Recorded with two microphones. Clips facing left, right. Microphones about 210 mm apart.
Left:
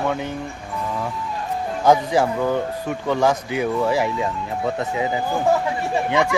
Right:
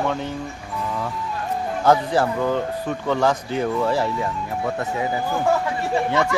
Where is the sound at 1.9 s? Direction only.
15° left (ahead or behind).